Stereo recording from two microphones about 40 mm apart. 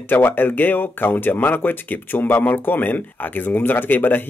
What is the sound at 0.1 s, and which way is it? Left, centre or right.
Speech, left.